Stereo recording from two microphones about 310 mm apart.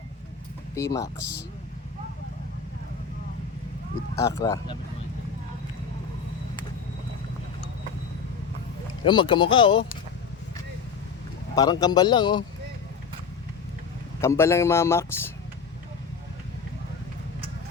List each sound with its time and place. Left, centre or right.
0.7 s speech: centre
4.2 s speech: centre
9.0 s speech: centre
11.5 s speech: centre
14.2 s speech: centre